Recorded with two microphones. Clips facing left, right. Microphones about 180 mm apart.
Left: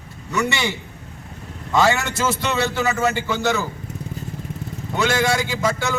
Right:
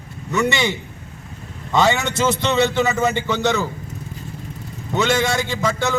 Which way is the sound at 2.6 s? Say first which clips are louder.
Right 3 dB; 20° right (ahead or behind).